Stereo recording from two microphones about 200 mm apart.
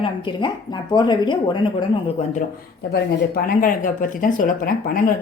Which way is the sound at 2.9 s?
45° left (ahead or behind).